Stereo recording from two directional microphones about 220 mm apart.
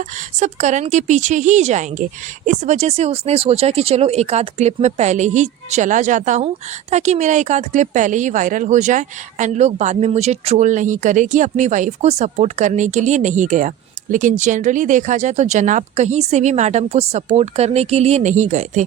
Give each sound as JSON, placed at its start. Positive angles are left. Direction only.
{"t": 0.3, "sound": "a woman's voice", "side_deg": -35}